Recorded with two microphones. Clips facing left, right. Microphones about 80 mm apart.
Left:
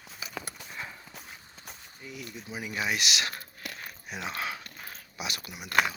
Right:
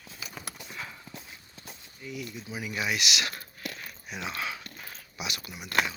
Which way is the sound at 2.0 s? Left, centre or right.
Left.